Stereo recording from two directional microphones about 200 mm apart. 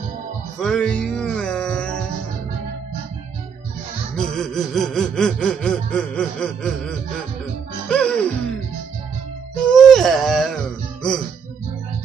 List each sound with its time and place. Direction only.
0.6 s music: 5° left (ahead or behind)
4.2 s a sound: centre (ahead or behind)
7.9 s music: 5° left (ahead or behind)
9.7 s music: centre (ahead or behind)